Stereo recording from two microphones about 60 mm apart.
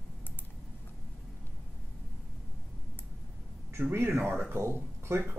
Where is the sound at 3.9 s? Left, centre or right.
Right.